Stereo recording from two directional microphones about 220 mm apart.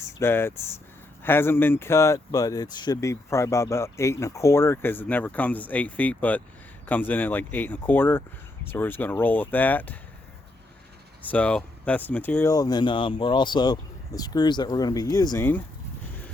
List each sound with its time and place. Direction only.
0.2 s speech: 10° left (ahead or behind)
11.2 s speech: 5° left (ahead or behind)